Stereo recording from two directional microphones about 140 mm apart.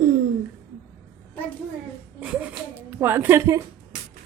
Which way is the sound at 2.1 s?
10° right (ahead or behind).